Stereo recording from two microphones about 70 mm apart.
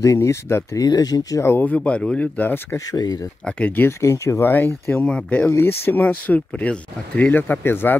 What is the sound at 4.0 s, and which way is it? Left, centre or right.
Speech, left.